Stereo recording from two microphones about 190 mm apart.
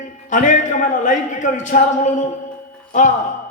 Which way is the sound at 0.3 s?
40° left (ahead or behind).